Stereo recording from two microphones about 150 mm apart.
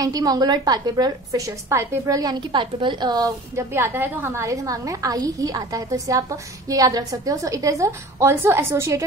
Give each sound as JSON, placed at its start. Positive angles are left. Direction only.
{"t": 0.0, "sound": "a woman's voice", "side_deg": -25}